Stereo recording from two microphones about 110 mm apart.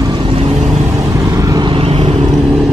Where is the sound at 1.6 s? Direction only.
60° right (ahead or behind).